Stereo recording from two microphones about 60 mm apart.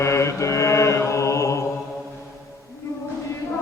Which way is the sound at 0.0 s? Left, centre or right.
Left.